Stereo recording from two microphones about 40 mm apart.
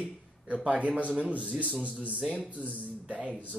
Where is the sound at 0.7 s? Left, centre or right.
Right.